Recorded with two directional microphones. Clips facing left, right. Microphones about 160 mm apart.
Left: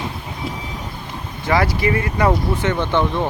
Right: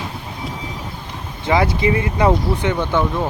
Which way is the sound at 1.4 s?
20° right (ahead or behind).